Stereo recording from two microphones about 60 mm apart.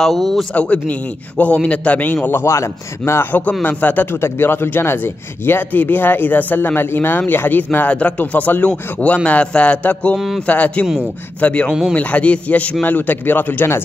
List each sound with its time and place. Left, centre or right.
0.0 s speech: centre
0.6 s a man's voice: left
2.2 s speech: left
3.3 s a man's voice: left
4.1 s speech: left
10.1 s speech: centre
10.4 s a man's voice: left